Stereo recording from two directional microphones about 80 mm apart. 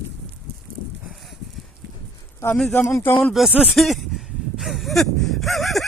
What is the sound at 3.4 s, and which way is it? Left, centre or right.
Speech, centre.